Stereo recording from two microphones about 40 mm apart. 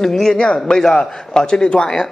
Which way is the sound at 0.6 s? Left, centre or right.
Centre.